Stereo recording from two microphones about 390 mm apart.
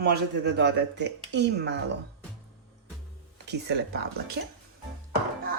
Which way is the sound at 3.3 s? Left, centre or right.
Right.